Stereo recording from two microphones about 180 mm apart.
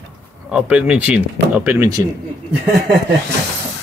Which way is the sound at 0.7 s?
5° right (ahead or behind).